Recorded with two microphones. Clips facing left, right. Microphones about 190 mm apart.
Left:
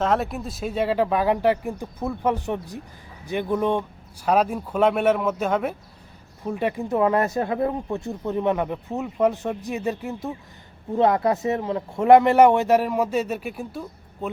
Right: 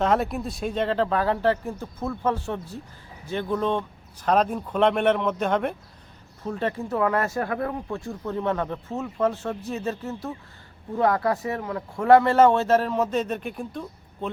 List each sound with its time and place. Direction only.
0.0 s speech: centre (ahead or behind)